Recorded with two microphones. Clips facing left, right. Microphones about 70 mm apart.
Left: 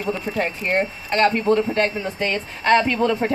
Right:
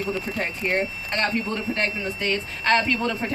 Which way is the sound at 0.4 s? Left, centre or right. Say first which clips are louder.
Left 4 dB; left.